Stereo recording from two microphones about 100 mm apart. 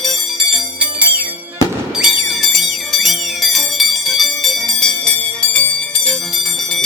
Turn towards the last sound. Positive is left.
turn(degrees=10)  # may be behind; listen again after turning